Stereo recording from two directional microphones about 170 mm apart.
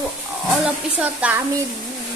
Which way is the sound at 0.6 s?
10° right (ahead or behind).